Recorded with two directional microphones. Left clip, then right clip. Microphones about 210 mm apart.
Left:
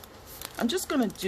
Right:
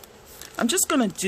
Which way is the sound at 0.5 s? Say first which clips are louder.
Right 5 dB; 30° right (ahead or behind).